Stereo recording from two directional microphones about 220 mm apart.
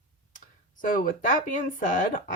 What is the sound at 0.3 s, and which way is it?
Speech, 35° left (ahead or behind).